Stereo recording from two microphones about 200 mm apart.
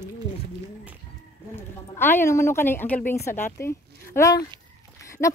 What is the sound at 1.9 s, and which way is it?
Speech, 10° left (ahead or behind).